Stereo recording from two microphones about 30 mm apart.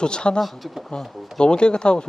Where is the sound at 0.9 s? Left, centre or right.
Left.